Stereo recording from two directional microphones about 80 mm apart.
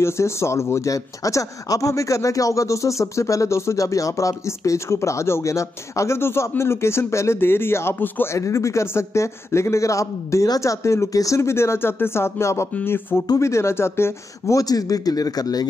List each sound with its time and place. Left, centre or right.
0.0 s speech: left
8.4 s a man's voice: left